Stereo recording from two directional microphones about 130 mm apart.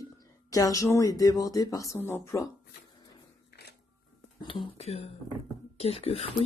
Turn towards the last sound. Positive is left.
turn(degrees=50)  # may be behind; listen again after turning